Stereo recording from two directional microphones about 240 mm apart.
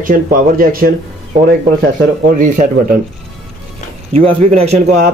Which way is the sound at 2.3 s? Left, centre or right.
Right.